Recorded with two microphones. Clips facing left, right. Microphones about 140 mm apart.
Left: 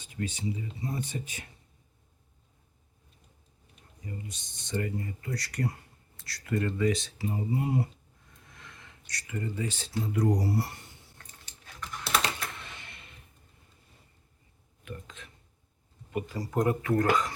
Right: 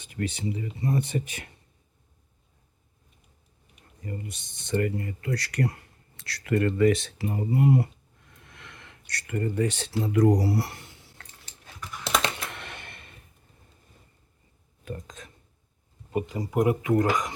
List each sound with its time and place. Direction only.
0.0 s speech: 65° right (ahead or behind)
4.0 s speech: 55° right (ahead or behind); by 11.3 s 90° right
12.5 s a sound: 65° right (ahead or behind)
14.8 s speech: 40° right (ahead or behind)
16.1 s speech: 20° right (ahead or behind)